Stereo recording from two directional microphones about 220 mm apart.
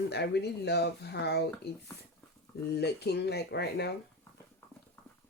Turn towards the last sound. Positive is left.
turn(degrees=50)  # may be behind; listen again after turning